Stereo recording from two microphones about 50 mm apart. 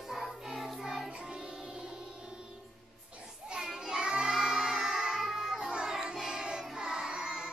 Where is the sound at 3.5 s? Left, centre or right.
Centre.